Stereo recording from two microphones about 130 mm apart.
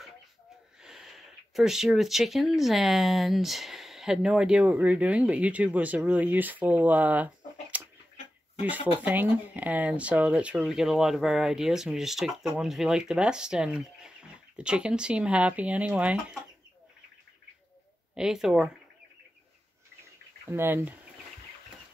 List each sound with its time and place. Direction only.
0.8 s speech: 5° right (ahead or behind)
8.5 s speech: 10° right (ahead or behind)
18.1 s speech: 5° right (ahead or behind)
20.4 s speech: 15° right (ahead or behind)